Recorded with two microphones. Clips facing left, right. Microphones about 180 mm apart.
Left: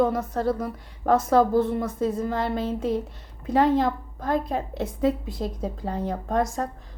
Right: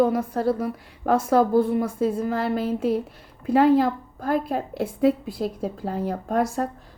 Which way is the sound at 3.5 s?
5° right (ahead or behind).